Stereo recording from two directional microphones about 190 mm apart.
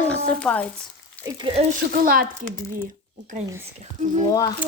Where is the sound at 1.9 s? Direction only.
50° right (ahead or behind).